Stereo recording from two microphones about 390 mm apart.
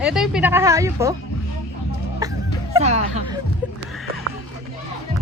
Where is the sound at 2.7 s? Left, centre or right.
Centre.